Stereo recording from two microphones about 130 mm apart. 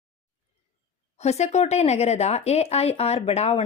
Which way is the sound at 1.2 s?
60° left (ahead or behind).